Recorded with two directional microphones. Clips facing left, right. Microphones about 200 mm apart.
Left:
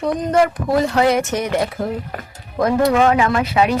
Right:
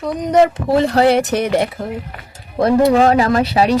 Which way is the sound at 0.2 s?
20° right (ahead or behind).